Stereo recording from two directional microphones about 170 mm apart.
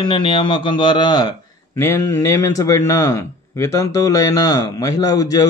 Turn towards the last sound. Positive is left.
turn(degrees=20)  # may be behind; listen again after turning